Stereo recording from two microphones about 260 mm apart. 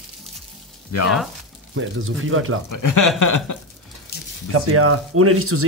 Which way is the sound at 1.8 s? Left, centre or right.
Right.